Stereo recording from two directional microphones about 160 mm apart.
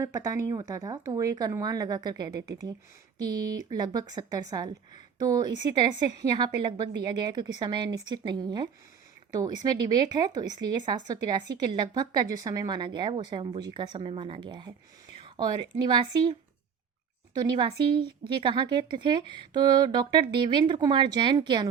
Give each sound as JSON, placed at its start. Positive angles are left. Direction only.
{"t": 0.0, "sound": "a woman's voice", "side_deg": -20}
{"t": 15.8, "sound": "a woman's voice", "side_deg": -30}